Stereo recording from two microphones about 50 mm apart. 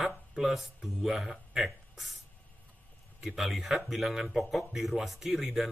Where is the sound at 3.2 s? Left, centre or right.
Centre.